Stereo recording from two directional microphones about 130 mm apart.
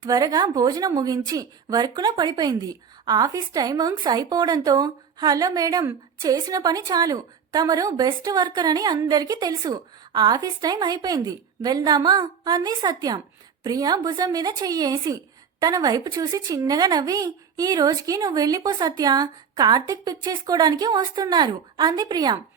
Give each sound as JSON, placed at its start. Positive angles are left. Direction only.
{"t": 0.0, "sound": "speech", "side_deg": -30}